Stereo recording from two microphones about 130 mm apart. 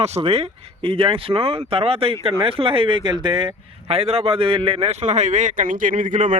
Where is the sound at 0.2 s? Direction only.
50° right (ahead or behind).